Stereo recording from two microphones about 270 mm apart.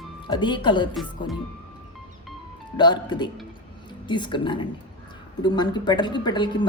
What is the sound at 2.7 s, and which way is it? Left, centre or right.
A woman's voice, centre.